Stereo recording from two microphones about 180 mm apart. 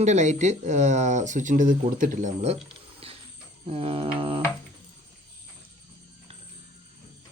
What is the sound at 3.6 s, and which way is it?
Speech, 30° right (ahead or behind).